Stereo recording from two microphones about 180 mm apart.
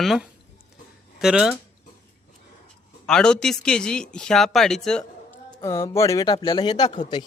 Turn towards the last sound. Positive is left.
turn(degrees=25)  # may be behind; listen again after turning